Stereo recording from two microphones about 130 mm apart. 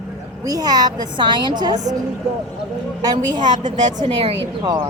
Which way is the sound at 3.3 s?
35° right (ahead or behind).